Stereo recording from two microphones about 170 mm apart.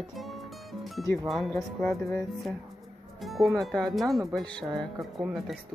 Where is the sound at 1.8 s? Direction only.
15° left (ahead or behind).